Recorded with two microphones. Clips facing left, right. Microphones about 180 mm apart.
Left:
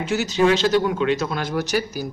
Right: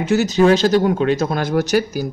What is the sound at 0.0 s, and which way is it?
Speech, 45° right (ahead or behind).